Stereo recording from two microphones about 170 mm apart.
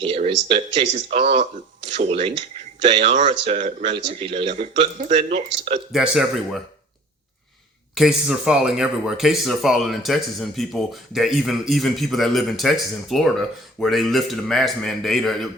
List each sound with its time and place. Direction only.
0.0 s speech: 35° right (ahead or behind)
4.5 s speech: 45° right (ahead or behind)
5.9 s speech: centre (ahead or behind)
7.9 s speech: 5° right (ahead or behind)